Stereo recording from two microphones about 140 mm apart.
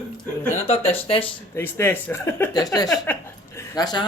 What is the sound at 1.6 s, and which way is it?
Speech, 15° left (ahead or behind).